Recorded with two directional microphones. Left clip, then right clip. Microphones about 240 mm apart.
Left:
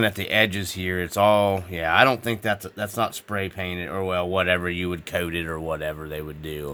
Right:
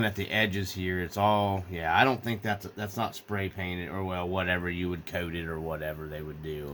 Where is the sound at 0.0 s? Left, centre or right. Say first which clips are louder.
Left 7 dB; left.